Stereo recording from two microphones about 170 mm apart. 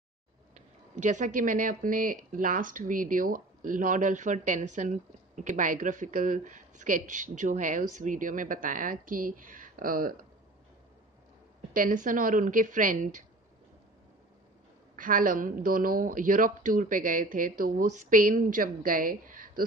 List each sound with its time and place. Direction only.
0.6 s speech: 45° right (ahead or behind)
11.7 s speech: 50° right (ahead or behind)
15.0 s speech: 55° right (ahead or behind)